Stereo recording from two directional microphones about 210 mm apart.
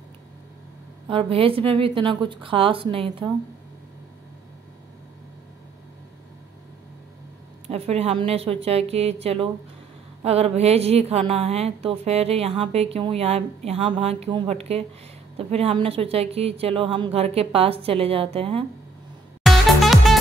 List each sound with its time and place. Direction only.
1.0 s a woman's voice: 25° right (ahead or behind)
7.6 s a woman's voice: 30° right (ahead or behind)
19.4 s music: centre (ahead or behind)